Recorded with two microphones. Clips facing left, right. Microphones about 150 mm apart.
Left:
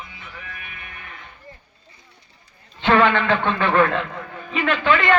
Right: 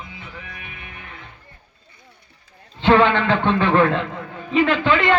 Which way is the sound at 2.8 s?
30° right (ahead or behind).